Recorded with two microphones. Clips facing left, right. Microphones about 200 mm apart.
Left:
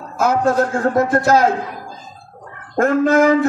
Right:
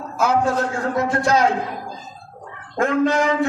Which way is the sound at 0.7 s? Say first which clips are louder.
Left 5 dB; 55° left (ahead or behind).